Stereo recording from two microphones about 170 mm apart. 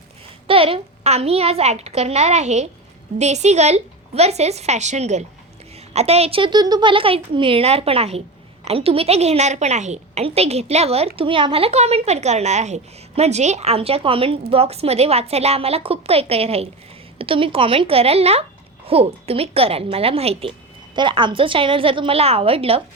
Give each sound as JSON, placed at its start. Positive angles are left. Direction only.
{"t": 0.4, "sound": "a woman's voice", "side_deg": -35}